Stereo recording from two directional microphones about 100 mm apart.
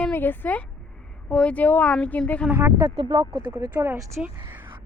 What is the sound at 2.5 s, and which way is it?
Speech, 20° right (ahead or behind).